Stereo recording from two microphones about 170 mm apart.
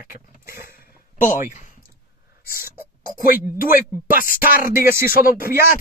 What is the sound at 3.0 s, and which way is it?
Speech, 55° left (ahead or behind).